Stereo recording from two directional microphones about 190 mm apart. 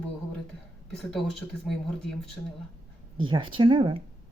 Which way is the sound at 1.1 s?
Centre (ahead or behind).